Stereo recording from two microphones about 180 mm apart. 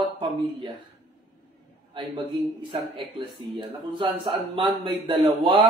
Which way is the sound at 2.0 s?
25° right (ahead or behind).